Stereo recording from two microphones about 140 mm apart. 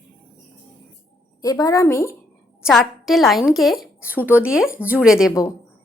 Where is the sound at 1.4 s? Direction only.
25° left (ahead or behind).